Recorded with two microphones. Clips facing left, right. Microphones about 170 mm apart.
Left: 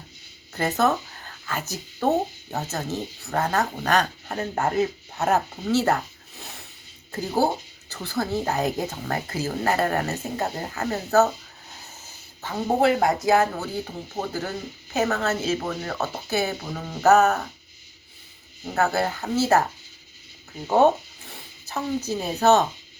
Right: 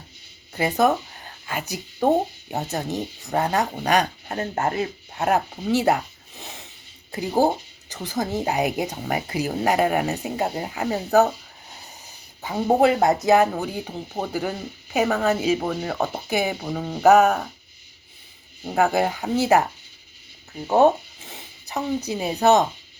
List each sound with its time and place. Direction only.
0.5 s speech: 10° right (ahead or behind)
12.4 s speech: 15° right (ahead or behind)
18.6 s speech: 10° right (ahead or behind)
20.7 s speech: 10° right (ahead or behind)